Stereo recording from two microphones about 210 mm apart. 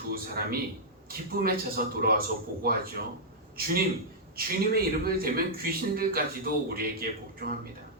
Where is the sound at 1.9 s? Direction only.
45° right (ahead or behind).